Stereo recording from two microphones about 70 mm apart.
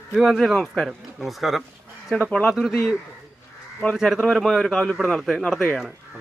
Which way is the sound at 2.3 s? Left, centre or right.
Centre.